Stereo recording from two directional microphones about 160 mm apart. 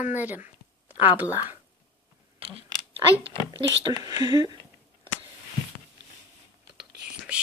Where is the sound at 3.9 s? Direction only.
25° right (ahead or behind).